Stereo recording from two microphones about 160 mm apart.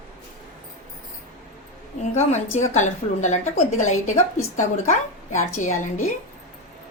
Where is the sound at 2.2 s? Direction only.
45° left (ahead or behind).